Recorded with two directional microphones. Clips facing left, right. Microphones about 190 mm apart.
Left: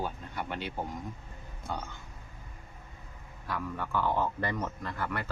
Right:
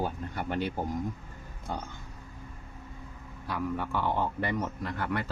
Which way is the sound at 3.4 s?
20° right (ahead or behind).